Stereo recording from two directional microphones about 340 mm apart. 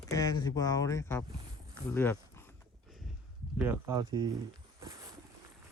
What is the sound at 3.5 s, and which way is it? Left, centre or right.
Speech, centre.